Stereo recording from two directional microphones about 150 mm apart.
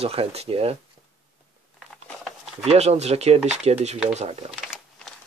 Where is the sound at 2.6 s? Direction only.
45° right (ahead or behind).